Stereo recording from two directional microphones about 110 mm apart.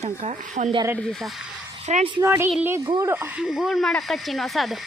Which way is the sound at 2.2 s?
25° right (ahead or behind).